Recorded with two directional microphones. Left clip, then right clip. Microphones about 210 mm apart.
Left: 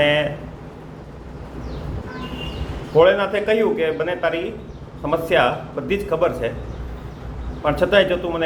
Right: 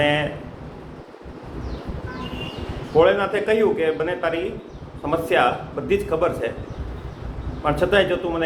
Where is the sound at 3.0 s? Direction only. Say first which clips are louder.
Left 2 dB; 5° left (ahead or behind).